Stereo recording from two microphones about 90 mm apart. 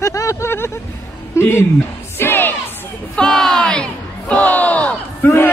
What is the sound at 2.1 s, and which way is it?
Music, 25° left (ahead or behind).